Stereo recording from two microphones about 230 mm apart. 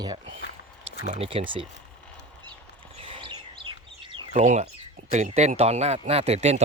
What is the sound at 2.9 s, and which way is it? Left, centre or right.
Chirp, right.